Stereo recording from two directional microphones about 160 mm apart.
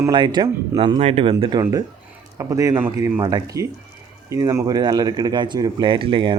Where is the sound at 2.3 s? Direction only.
20° right (ahead or behind).